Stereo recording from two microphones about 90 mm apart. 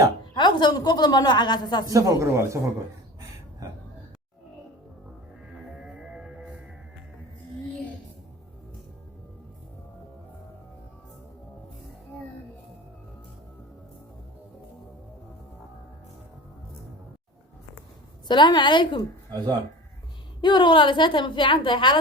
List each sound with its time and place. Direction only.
0.3 s a woman's voice: 55° left (ahead or behind)
1.9 s speech: 40° right (ahead or behind)
5.7 s music: 5° right (ahead or behind)
18.3 s a woman's voice: 60° left (ahead or behind)
20.4 s a woman's voice: 60° left (ahead or behind)